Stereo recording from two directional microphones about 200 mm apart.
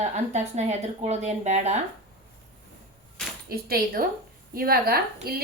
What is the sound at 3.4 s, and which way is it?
Speech, 50° right (ahead or behind).